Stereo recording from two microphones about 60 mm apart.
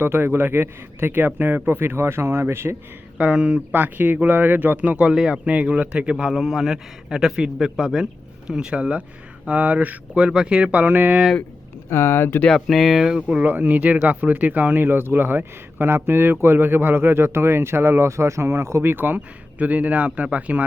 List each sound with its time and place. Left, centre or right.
0.0 s speech: right
3.2 s speech: centre
3.7 s a man's voice: right
11.9 s speech: left
12.5 s speech: centre
13.1 s a man's voice: centre
13.4 s speech: right